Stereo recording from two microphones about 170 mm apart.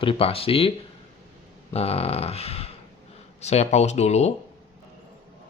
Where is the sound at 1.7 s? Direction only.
35° left (ahead or behind).